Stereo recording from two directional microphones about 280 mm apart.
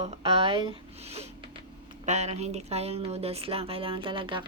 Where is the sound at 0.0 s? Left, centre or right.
Centre.